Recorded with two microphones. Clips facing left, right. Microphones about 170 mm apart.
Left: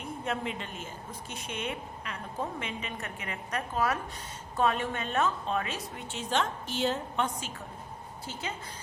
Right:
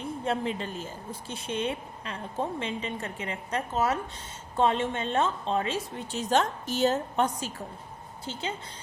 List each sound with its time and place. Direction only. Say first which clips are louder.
0.0 s a woman's voice: right 4 dB; 30° right (ahead or behind)
6.1 s speech: right 5 dB; 40° right (ahead or behind)
8.2 s a woman's voice: right 4 dB; 30° right (ahead or behind)